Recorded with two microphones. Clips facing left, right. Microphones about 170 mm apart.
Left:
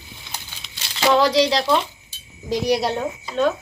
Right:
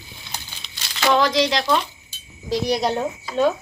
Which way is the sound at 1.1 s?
30° left (ahead or behind).